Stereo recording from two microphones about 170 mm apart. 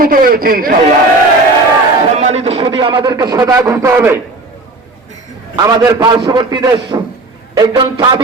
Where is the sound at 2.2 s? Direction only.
40° right (ahead or behind); by 4.1 s 15° right (ahead or behind).